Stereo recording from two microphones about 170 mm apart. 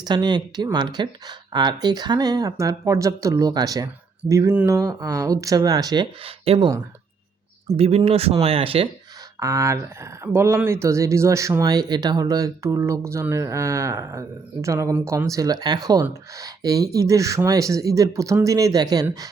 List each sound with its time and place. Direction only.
0.0 s speech: 25° right (ahead or behind)
7.8 s speech: 35° right (ahead or behind)
9.4 s speech: 20° right (ahead or behind)